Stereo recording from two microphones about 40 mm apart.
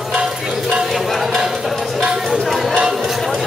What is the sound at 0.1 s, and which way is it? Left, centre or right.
Music, right.